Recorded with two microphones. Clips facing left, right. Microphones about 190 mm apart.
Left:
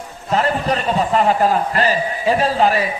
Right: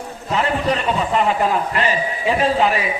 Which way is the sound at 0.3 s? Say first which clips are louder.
Left 1 dB; 40° left (ahead or behind).